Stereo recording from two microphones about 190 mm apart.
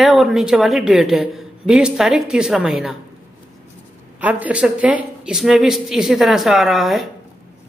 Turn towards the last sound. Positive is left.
turn(degrees=0)  # may be behind; listen again after turning